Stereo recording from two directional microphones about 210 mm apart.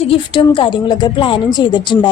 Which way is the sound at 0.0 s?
25° left (ahead or behind).